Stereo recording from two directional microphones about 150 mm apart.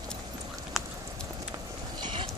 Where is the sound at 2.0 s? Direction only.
30° right (ahead or behind).